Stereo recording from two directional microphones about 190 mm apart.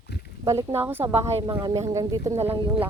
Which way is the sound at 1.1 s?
30° right (ahead or behind).